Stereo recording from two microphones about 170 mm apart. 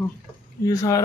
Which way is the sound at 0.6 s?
20° left (ahead or behind).